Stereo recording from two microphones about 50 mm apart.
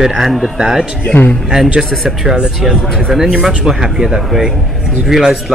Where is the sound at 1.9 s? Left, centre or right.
Centre.